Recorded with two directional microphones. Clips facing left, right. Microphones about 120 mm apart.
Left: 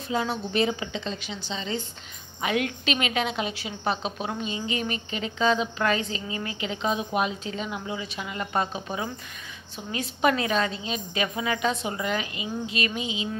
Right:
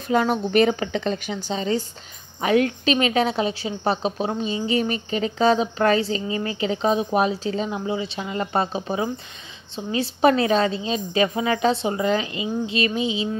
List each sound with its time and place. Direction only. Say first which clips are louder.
0.1 s a woman's voice: right 8 dB; 55° right (ahead or behind); by 13.3 s 30° right (ahead or behind)